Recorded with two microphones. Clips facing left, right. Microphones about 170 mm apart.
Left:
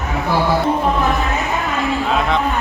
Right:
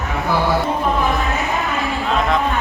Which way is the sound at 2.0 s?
Centre (ahead or behind).